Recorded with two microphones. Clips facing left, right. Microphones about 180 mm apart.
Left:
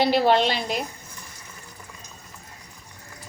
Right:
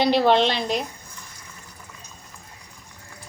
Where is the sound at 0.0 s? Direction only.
5° left (ahead or behind).